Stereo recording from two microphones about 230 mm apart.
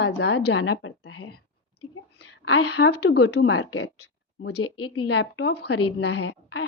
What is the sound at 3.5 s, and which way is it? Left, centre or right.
A woman's voice, left.